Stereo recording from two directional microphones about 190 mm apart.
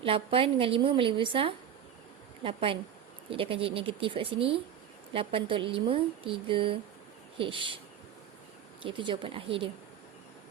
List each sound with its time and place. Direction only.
0.0 s a woman's voice: 30° right (ahead or behind)
8.8 s a woman's voice: 25° right (ahead or behind)